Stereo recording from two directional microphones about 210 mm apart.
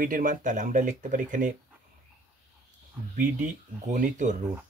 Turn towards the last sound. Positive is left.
turn(degrees=-35)  # may be behind; listen again after turning